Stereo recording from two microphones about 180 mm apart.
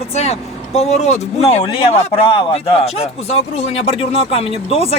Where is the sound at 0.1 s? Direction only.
35° left (ahead or behind).